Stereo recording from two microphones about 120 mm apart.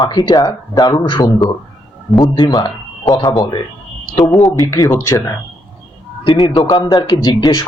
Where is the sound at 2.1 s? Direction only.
Centre (ahead or behind).